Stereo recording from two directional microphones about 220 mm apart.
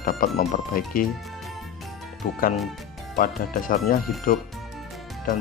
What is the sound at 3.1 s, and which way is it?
Speech, 40° left (ahead or behind).